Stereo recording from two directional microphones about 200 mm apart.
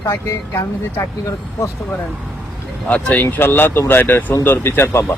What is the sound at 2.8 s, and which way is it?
Speech, 5° left (ahead or behind).